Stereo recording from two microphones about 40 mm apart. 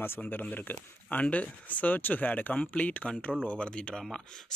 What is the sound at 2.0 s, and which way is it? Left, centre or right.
Speech, left.